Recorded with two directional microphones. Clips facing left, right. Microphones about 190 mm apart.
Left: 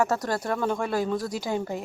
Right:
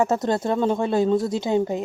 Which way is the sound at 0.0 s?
20° right (ahead or behind).